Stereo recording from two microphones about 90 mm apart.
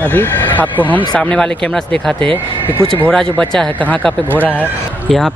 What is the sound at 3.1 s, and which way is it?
Speech, 10° left (ahead or behind).